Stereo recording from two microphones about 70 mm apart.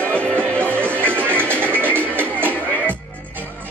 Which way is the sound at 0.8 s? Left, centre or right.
Right.